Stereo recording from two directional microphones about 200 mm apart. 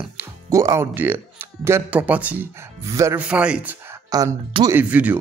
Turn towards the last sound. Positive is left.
turn(degrees=-5)  # may be behind; listen again after turning